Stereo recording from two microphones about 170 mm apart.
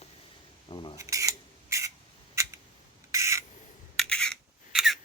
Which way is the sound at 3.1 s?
15° right (ahead or behind).